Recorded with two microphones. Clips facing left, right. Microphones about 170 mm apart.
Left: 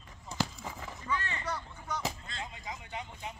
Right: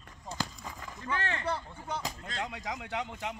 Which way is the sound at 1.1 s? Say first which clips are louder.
Right 2 dB; 75° right (ahead or behind).